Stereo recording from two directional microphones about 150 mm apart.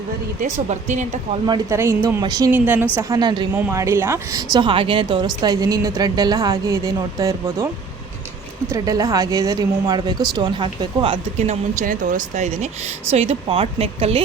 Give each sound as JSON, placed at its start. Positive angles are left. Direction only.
{"t": 0.7, "sound": "speech", "side_deg": -50}
{"t": 1.7, "sound": "speech", "side_deg": -20}
{"t": 2.5, "sound": "a woman's voice", "side_deg": -10}
{"t": 3.5, "sound": "a woman's voice", "side_deg": -15}
{"t": 4.5, "sound": "speech", "side_deg": -35}
{"t": 8.7, "sound": "speech", "side_deg": -25}